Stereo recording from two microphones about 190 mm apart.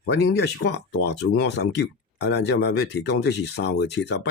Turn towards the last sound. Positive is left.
turn(degrees=65)  # may be behind; listen again after turning